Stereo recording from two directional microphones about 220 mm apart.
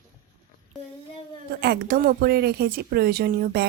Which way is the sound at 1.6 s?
45° right (ahead or behind).